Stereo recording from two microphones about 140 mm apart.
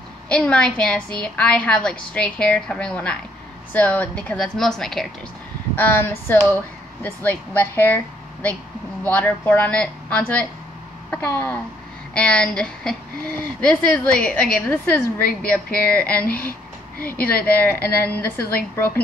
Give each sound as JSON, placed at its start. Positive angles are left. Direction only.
{"t": 0.3, "sound": "a woman's voice", "side_deg": 5}
{"t": 5.8, "sound": "a woman's voice", "side_deg": 15}
{"t": 16.3, "sound": "a woman's voice", "side_deg": 90}
{"t": 17.5, "sound": "a woman's voice", "side_deg": 15}